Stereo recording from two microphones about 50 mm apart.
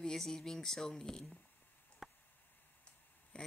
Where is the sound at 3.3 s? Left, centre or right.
Centre.